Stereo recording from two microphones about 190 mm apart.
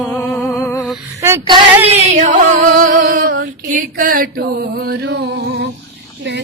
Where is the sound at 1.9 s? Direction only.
40° right (ahead or behind).